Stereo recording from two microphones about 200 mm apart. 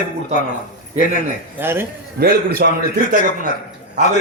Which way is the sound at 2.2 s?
50° right (ahead or behind).